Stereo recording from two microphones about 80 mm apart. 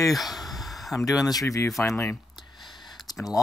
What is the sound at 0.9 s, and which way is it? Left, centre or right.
Speech, left.